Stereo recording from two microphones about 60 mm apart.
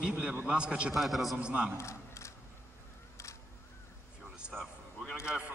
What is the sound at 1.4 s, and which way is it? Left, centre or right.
Speech, right.